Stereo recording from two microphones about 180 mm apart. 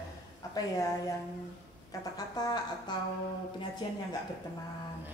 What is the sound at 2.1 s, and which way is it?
Speech, 20° left (ahead or behind).